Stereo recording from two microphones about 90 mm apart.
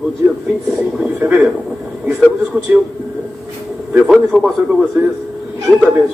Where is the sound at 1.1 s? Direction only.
20° right (ahead or behind).